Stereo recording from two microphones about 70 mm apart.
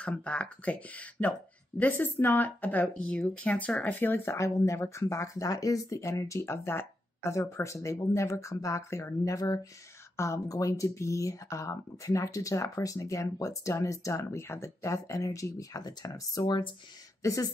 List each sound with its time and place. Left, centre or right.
0.0 s speech: centre; by 15.8 s left
15.8 s speech: left
17.2 s speech: left